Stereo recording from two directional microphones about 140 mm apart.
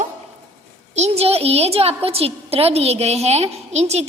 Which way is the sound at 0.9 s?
50° right (ahead or behind).